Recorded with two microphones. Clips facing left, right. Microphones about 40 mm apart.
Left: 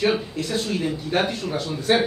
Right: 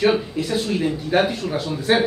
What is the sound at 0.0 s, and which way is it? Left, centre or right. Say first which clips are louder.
Speech: right 3 dB; centre.